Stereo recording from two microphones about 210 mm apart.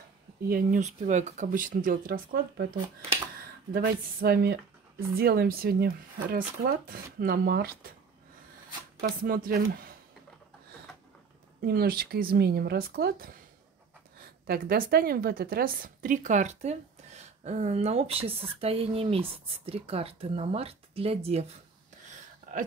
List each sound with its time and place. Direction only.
0.5 s speech: 35° right (ahead or behind)
3.7 s speech: 45° right (ahead or behind)
9.0 s speech: 45° right (ahead or behind)
11.6 s speech: 45° right (ahead or behind)
14.4 s speech: 45° right (ahead or behind); by 21.5 s 30° right (ahead or behind)
22.5 s a sound: 40° right (ahead or behind)